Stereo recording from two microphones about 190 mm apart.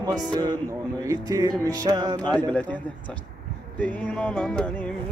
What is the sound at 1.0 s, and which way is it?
Speech, 20° right (ahead or behind).